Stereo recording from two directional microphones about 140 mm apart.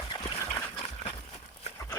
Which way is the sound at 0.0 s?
30° left (ahead or behind).